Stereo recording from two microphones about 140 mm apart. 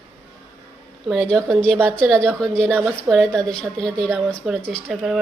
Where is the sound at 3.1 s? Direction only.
10° right (ahead or behind).